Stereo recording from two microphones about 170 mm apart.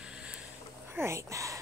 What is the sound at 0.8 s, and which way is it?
Speech, 15° right (ahead or behind).